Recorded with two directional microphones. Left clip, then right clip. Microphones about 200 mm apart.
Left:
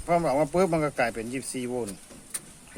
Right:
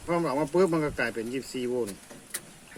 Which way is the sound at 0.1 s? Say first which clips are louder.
Left 3 dB; 60° left (ahead or behind).